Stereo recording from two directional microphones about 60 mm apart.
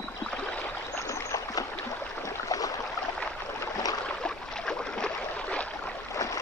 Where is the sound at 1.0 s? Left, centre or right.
Left.